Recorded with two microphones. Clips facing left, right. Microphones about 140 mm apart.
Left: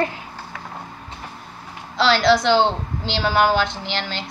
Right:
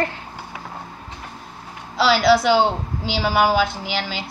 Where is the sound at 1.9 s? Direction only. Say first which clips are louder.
Right 1 dB; 5° right (ahead or behind).